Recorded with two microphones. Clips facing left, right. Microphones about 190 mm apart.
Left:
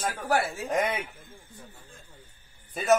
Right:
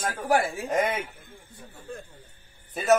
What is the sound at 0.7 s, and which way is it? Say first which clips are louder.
Speech: right 2 dB; centre (ahead or behind).